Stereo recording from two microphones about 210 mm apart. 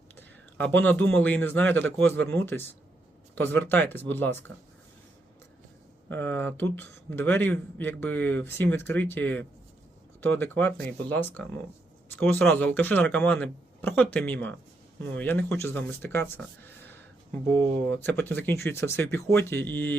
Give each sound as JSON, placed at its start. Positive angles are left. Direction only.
{"t": 0.5, "sound": "a man's voice", "side_deg": 10}
{"t": 6.1, "sound": "a man's voice", "side_deg": 10}